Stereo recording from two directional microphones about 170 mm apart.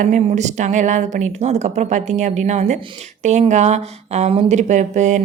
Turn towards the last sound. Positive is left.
turn(degrees=-45)  # may be behind; listen again after turning